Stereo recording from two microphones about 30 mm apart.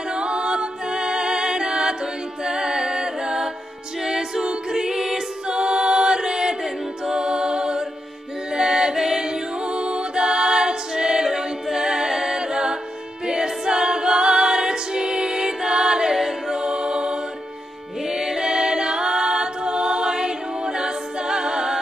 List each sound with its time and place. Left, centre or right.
0.1 s music: right
2.4 s a capella: right
5.5 s choir: right
7.1 s music: right
8.9 s a capella: centre
9.2 s music: right
11.2 s a capella: centre
16.2 s music: centre
16.6 s music: right
18.0 s music: centre
18.4 s a capella: right